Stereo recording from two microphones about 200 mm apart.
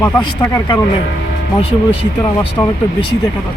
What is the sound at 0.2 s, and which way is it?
Speech, 20° left (ahead or behind).